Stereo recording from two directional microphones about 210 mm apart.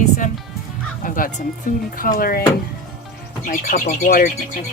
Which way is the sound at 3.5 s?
40° left (ahead or behind).